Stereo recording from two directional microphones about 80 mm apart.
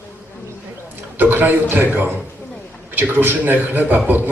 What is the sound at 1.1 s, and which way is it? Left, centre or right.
A man's voice, right.